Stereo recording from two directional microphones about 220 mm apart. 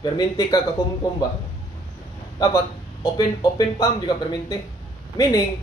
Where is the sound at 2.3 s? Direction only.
20° left (ahead or behind).